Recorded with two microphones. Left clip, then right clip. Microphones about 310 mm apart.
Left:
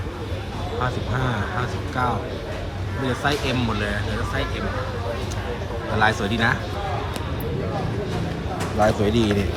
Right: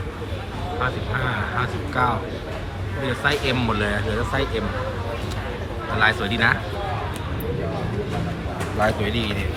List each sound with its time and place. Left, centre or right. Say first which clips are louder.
1.5 s speech: right 2 dB; centre
3.2 s speech: right 3 dB; centre
6.0 s speech: right 1 dB; centre
8.8 s speech: left 3 dB; centre